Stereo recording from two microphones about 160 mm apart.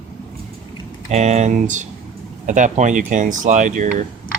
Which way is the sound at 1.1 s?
45° right (ahead or behind).